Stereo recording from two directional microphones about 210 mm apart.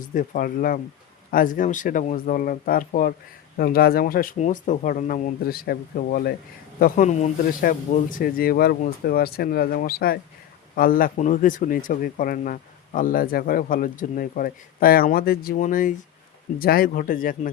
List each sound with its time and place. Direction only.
0.1 s speech: 40° left (ahead or behind)